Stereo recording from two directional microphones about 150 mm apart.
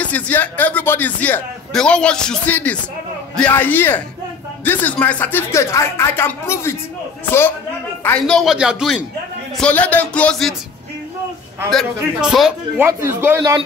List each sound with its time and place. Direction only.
0.0 s speech: 10° left (ahead or behind)
8.4 s a man's voice: 5° right (ahead or behind)
9.6 s speech: 10° left (ahead or behind)
11.7 s a man's voice: 5° right (ahead or behind)
12.7 s a man's voice: 15° right (ahead or behind)